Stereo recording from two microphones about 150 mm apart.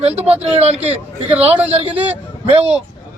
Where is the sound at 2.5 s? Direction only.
40° right (ahead or behind).